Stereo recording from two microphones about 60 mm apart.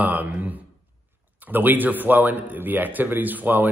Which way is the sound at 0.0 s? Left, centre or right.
Right.